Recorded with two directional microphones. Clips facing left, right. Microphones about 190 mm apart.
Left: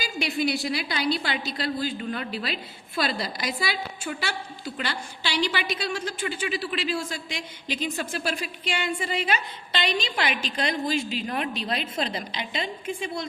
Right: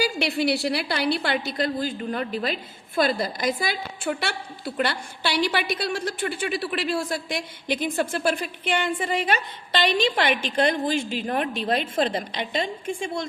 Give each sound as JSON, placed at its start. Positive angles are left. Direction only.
{"t": 0.2, "sound": "a woman's voice", "side_deg": -65}